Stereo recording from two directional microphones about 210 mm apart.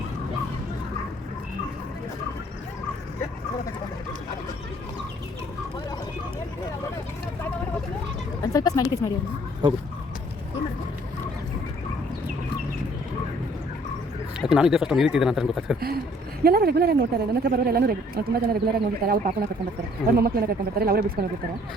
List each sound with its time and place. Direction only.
8.5 s speech: 15° left (ahead or behind)
9.6 s speech: 20° right (ahead or behind)
14.4 s speech: 5° right (ahead or behind)
16.4 s speech: 45° right (ahead or behind)